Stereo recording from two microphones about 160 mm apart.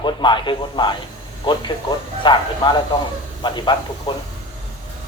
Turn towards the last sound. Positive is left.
turn(degrees=30)  # may be behind; listen again after turning